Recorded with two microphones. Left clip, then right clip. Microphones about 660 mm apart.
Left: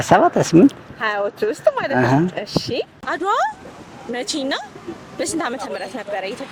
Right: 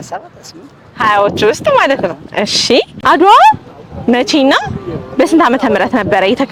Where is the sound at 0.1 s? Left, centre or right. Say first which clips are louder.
Left 13 dB; left.